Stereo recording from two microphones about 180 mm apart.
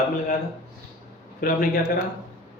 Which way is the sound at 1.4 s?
55° left (ahead or behind).